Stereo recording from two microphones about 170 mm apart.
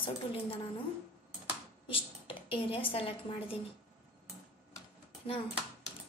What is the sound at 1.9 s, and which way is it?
A woman's voice, 30° left (ahead or behind).